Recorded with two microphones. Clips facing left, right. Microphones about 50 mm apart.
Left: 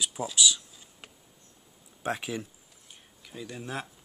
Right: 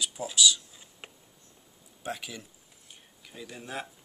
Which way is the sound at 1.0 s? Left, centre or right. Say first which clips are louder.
Right 3 dB; right.